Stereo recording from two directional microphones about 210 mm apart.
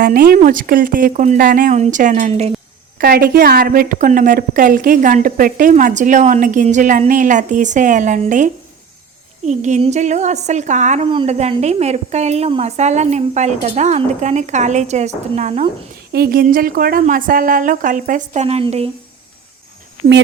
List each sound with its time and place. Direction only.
0.0 s a woman's voice: 45° right (ahead or behind)
16.1 s a woman's voice: 45° right (ahead or behind); by 18.9 s 30° right (ahead or behind)